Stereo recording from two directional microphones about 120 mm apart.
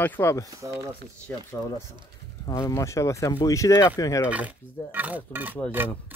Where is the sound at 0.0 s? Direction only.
20° left (ahead or behind).